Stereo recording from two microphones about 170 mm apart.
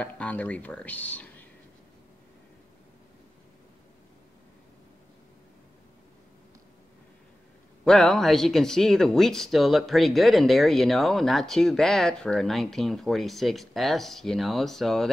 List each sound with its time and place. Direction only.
0.0 s speech: 10° left (ahead or behind)
7.8 s speech: 5° left (ahead or behind)